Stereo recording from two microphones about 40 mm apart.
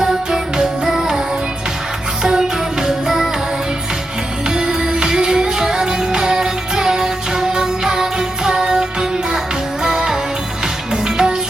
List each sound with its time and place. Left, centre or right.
0.0 s music: centre
2.2 s music: centre
4.5 s music: centre